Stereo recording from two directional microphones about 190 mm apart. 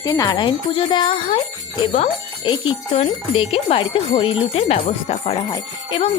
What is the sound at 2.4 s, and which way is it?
Speech, 25° left (ahead or behind).